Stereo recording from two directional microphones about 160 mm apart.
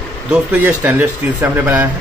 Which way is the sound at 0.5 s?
10° right (ahead or behind).